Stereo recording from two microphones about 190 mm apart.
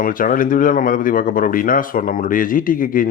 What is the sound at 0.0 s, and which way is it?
Speech, 45° left (ahead or behind).